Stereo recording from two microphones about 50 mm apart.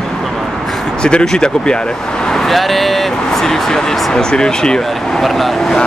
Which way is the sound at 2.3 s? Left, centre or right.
Centre.